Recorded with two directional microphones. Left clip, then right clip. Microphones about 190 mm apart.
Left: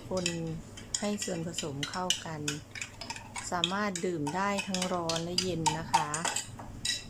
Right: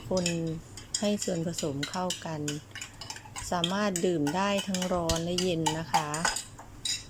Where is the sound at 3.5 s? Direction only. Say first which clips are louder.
Right 2 dB; 10° right (ahead or behind).